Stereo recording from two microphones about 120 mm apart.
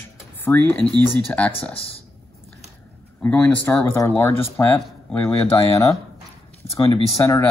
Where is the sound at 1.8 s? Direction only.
50° left (ahead or behind).